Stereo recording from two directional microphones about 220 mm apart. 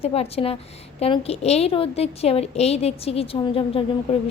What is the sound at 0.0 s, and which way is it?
A woman's voice, 25° left (ahead or behind).